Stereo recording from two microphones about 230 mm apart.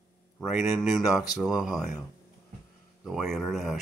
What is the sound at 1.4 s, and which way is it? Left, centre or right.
Speech, centre.